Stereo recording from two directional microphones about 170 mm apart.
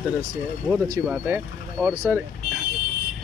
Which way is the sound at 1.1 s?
5° right (ahead or behind).